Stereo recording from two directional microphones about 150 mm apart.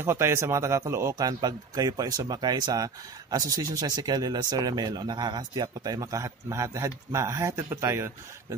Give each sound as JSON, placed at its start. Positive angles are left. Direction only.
{"t": 0.0, "sound": "a man's voice", "side_deg": -15}